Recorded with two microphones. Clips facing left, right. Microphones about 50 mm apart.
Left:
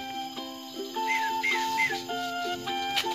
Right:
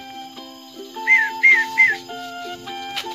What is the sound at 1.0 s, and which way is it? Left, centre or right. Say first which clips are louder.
Whistling: right 13 dB; right.